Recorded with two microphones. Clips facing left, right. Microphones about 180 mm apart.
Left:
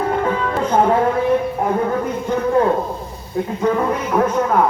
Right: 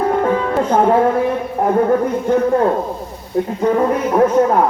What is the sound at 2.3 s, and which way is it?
Speech, 55° right (ahead or behind).